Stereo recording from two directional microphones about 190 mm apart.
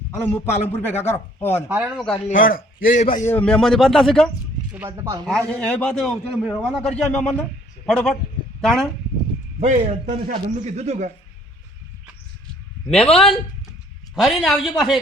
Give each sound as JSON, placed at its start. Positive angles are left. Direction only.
{"t": 0.2, "sound": "speech", "side_deg": 10}
{"t": 1.6, "sound": "speech", "side_deg": -10}
{"t": 2.1, "sound": "speech", "side_deg": 35}
{"t": 2.4, "sound": "a man's voice", "side_deg": 50}
{"t": 3.2, "sound": "a man's voice", "side_deg": 5}
{"t": 4.7, "sound": "speech", "side_deg": -10}
{"t": 5.2, "sound": "a man's voice", "side_deg": 5}
{"t": 9.6, "sound": "speech", "side_deg": -40}
{"t": 13.1, "sound": "a man's voice", "side_deg": 0}